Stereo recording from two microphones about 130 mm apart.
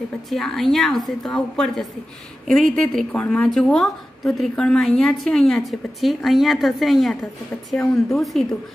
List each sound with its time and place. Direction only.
0.3 s a woman's voice: centre (ahead or behind)